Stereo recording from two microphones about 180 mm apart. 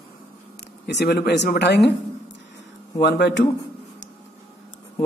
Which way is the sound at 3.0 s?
70° left (ahead or behind).